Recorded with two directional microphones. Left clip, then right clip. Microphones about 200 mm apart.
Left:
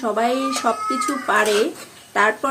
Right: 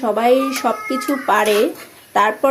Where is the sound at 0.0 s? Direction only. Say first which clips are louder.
Right 5 dB; 15° right (ahead or behind).